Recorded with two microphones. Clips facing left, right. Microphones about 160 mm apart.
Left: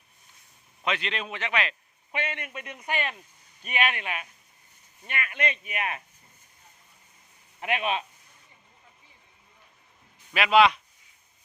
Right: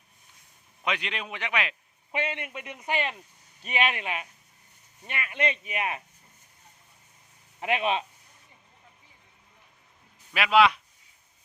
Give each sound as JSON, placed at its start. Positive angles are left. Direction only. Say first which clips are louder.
{"t": 0.8, "sound": "a man's voice", "louder": "left 1 dB", "side_deg": -10}
{"t": 2.1, "sound": "a man's voice", "louder": "right 2 dB", "side_deg": -25}
{"t": 7.6, "sound": "a man's voice", "louder": "right 2 dB", "side_deg": -30}
{"t": 10.3, "sound": "speech", "louder": "left 1 dB", "side_deg": -5}